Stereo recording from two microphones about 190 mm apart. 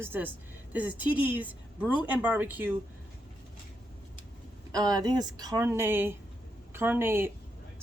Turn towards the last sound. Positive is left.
turn(degrees=-10)  # may be behind; listen again after turning